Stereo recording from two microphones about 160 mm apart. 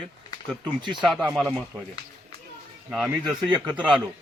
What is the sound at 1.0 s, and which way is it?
Speech, centre (ahead or behind).